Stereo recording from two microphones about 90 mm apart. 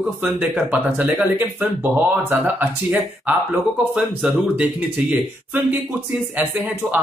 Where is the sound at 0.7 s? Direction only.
15° right (ahead or behind).